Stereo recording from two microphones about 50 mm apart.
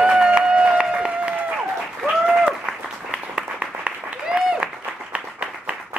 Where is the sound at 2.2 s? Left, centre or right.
Centre.